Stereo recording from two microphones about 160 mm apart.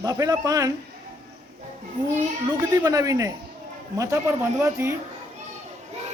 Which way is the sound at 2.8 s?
20° right (ahead or behind).